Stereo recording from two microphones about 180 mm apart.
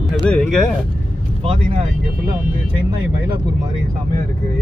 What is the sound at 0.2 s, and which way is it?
Speech, 5° left (ahead or behind).